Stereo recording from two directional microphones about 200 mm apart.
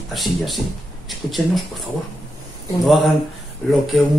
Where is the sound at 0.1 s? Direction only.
Centre (ahead or behind).